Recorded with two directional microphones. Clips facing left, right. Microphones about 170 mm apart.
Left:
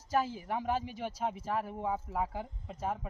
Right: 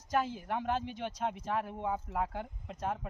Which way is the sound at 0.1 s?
5° left (ahead or behind).